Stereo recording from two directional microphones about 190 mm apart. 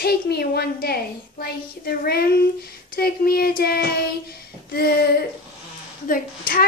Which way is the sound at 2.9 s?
55° left (ahead or behind).